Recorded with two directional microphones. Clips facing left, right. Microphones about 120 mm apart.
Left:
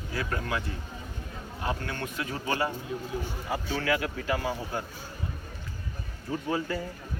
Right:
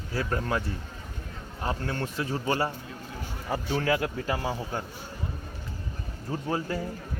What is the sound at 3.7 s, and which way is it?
Speech, 35° right (ahead or behind).